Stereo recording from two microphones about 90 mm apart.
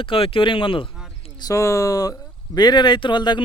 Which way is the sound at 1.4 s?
35° left (ahead or behind).